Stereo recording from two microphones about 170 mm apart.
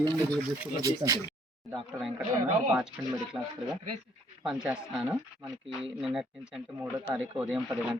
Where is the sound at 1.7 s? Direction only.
Centre (ahead or behind).